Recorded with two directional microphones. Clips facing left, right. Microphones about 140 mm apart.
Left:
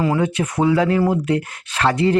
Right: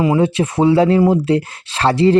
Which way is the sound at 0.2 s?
25° right (ahead or behind).